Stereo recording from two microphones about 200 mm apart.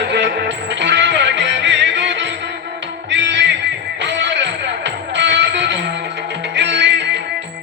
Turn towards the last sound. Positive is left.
turn(degrees=-60)  # may be behind; listen again after turning